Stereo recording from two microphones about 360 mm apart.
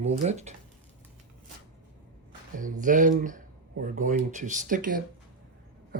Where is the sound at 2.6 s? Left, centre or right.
Right.